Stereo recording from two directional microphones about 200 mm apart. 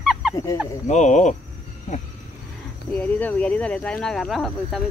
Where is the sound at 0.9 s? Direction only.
35° left (ahead or behind).